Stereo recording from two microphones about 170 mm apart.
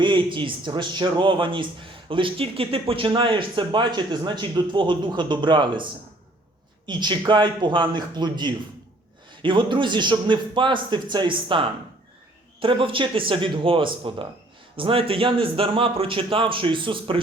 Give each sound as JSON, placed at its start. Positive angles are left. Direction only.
{"t": 0.0, "sound": "a man's voice", "side_deg": -30}